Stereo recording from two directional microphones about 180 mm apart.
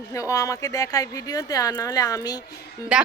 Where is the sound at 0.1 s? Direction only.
15° left (ahead or behind).